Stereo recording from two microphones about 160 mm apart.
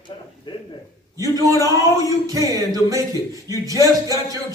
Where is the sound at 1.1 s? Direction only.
20° right (ahead or behind).